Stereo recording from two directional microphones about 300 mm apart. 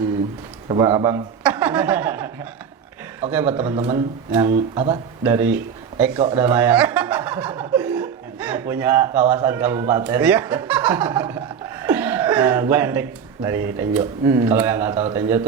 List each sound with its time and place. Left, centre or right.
0.7 s a man's voice: centre
3.5 s a man's voice: centre
6.1 s speech: centre
6.4 s a man's voice: centre